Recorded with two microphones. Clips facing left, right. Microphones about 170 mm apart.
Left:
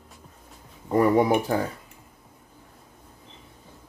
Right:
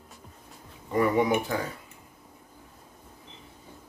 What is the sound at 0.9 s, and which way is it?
Dishes, 40° left (ahead or behind).